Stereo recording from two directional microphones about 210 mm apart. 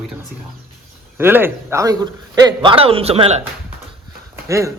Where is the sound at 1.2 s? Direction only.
10° right (ahead or behind); by 3.4 s 30° right (ahead or behind).